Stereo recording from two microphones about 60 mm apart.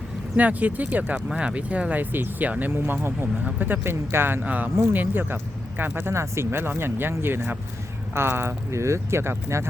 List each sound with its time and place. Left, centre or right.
0.3 s speech: right
1.3 s speech: centre; by 4.4 s right
4.4 s speech: right